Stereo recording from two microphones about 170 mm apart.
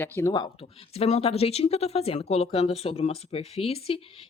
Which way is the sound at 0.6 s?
40° left (ahead or behind).